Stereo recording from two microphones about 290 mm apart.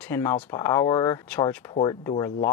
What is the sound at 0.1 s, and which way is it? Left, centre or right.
Speech, centre.